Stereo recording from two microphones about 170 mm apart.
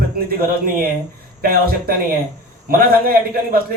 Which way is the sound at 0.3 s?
60° right (ahead or behind).